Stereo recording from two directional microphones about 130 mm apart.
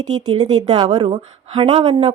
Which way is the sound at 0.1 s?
60° right (ahead or behind).